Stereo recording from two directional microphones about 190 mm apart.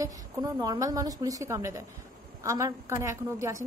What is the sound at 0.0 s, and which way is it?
A woman's voice, 20° right (ahead or behind).